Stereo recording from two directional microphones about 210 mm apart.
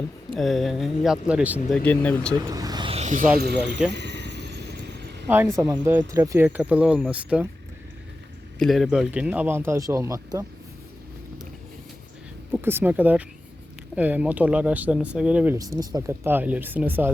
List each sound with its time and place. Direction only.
0.3 s speech: centre (ahead or behind)
1.8 s speech: 5° left (ahead or behind)
2.5 s a sound: 15° right (ahead or behind); by 3.2 s 35° right (ahead or behind)
3.9 s vehicle: 55° right (ahead or behind)
5.3 s speech: 10° right (ahead or behind)
8.5 s speech: centre (ahead or behind)
12.5 s speech: 10° right (ahead or behind)
15.5 s speech: 15° right (ahead or behind)